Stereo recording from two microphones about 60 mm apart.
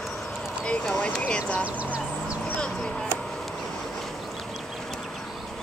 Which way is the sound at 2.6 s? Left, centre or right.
Centre.